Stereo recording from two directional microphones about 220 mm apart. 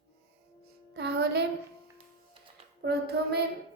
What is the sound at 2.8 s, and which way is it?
Speech, 45° right (ahead or behind).